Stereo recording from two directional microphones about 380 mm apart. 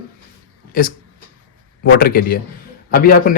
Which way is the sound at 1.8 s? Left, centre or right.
Left.